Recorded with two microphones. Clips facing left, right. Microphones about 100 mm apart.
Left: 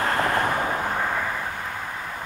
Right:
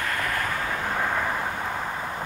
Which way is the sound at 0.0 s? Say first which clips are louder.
Left 6 dB; 30° left (ahead or behind).